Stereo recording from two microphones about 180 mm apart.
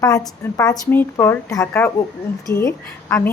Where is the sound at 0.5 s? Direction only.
20° left (ahead or behind).